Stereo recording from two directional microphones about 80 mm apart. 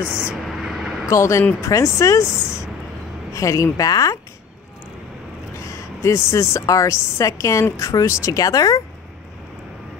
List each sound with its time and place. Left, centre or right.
0.0 s speech: centre
0.5 s vehicle: centre
1.1 s speech: left
3.3 s speech: left
5.6 s a woman's voice: left